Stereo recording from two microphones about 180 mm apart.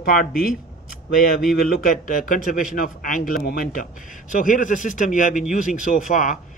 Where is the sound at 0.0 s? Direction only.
50° left (ahead or behind).